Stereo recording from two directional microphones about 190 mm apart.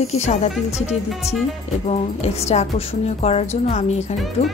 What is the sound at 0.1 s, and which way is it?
Speech, 35° left (ahead or behind).